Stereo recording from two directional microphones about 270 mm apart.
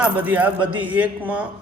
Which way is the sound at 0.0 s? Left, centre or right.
Centre.